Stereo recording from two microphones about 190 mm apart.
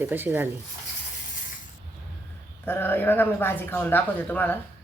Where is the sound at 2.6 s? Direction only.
10° left (ahead or behind).